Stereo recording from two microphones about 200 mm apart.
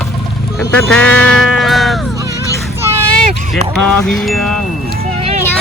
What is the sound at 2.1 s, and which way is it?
Music, 15° right (ahead or behind).